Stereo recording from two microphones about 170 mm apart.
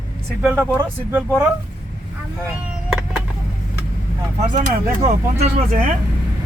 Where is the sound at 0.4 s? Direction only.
10° right (ahead or behind).